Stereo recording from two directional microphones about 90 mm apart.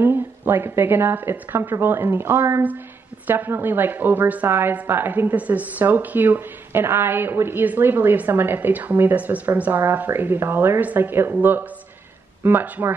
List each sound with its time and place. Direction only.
0.0 s a woman's voice: 25° right (ahead or behind)